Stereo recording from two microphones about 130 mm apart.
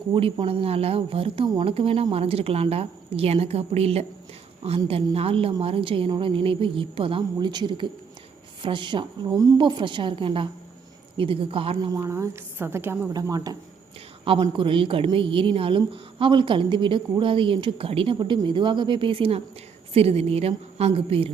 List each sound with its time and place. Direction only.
0.1 s a woman's voice: 40° right (ahead or behind)
11.9 s a woman's voice: 20° right (ahead or behind)
13.1 s a woman's voice: 30° right (ahead or behind)
14.5 s a woman's voice: 40° right (ahead or behind)